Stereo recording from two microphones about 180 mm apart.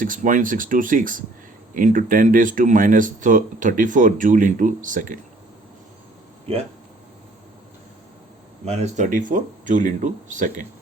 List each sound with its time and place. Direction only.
0.0 s speech: 50° right (ahead or behind)
8.6 s speech: 35° right (ahead or behind)
9.0 s speech: 45° right (ahead or behind)